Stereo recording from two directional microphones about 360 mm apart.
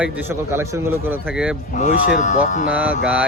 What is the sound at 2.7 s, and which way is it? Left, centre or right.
Speech, centre.